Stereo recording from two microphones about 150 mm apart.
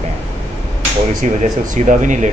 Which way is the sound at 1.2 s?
55° right (ahead or behind).